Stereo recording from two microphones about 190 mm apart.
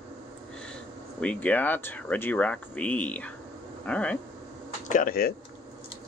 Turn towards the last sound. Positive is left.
turn(degrees=50)  # may be behind; listen again after turning